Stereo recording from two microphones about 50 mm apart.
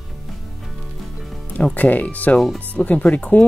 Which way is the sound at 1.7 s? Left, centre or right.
Left.